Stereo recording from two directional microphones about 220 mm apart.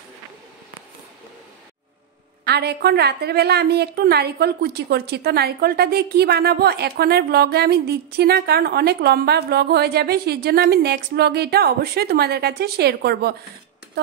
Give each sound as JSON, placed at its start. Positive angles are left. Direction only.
{"t": 2.4, "sound": "a woman's voice", "side_deg": -50}